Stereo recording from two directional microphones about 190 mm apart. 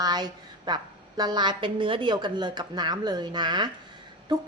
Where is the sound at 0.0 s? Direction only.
20° right (ahead or behind).